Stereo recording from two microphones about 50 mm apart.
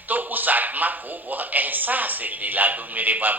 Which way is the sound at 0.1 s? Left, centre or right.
Right.